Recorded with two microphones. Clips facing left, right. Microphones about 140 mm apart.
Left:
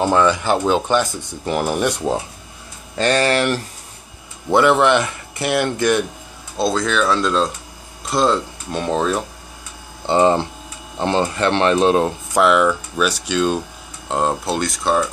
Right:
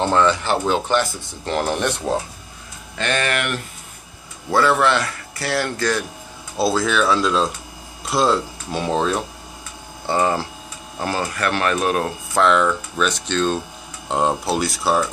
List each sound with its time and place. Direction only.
0.0 s speech: 10° left (ahead or behind)
3.0 s speech: 35° left (ahead or behind)
4.5 s speech: 20° left (ahead or behind)
6.5 s speech: 5° right (ahead or behind)
10.0 s speech: 25° left (ahead or behind)
12.4 s speech: 5° left (ahead or behind)
14.0 s speech: centre (ahead or behind)